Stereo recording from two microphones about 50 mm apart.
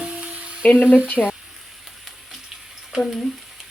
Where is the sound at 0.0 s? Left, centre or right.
Right.